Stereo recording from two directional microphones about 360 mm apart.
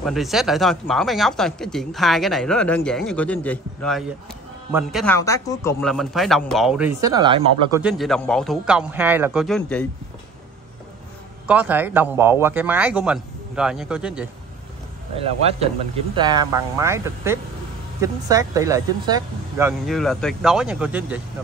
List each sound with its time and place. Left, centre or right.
0.0 s speech: centre
7.8 s speech: centre
11.4 s speech: centre
15.1 s speech: centre
19.9 s speech: centre